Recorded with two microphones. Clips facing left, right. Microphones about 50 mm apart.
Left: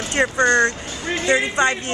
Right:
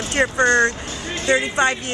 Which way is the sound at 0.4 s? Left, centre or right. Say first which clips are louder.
Even; right.